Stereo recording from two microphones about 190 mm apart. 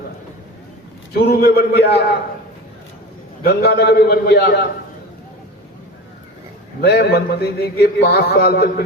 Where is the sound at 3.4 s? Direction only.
55° left (ahead or behind).